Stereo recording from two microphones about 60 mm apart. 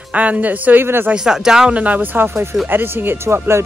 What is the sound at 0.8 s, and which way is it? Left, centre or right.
Speech, right.